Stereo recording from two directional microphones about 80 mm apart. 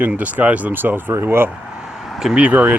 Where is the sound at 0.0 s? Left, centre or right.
Centre.